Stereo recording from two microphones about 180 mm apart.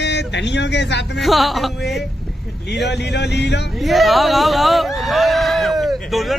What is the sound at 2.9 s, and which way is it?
Speech, 70° left (ahead or behind).